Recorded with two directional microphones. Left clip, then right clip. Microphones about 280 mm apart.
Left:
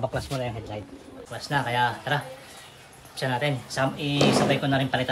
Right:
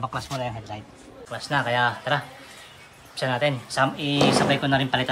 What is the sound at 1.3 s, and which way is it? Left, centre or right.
A man's voice, centre.